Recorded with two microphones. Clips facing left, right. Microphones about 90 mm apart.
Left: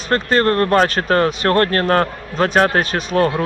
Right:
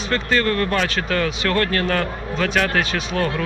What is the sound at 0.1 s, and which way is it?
Speech, 40° left (ahead or behind).